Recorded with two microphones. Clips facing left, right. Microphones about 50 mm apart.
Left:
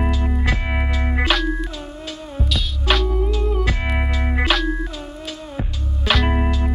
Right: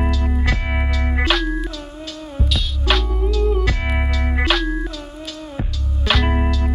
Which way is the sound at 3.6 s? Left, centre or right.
Left.